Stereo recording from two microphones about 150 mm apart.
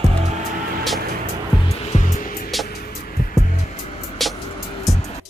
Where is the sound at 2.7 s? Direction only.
85° left.